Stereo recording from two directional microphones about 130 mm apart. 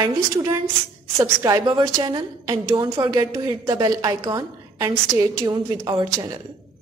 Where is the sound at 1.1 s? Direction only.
25° right (ahead or behind).